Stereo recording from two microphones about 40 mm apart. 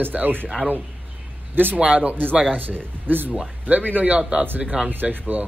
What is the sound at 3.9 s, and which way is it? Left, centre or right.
Speech, right.